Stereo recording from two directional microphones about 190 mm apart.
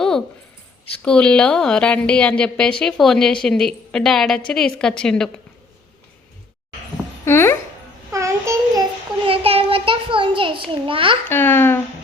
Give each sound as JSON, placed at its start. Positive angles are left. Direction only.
{"t": 1.0, "sound": "a woman's voice", "side_deg": 5}
{"t": 7.3, "sound": "speech", "side_deg": 15}
{"t": 8.1, "sound": "a sound", "side_deg": -15}
{"t": 9.2, "sound": "a sound", "side_deg": -30}
{"t": 10.8, "sound": "a child's voice", "side_deg": -30}
{"t": 11.3, "sound": "speech", "side_deg": 10}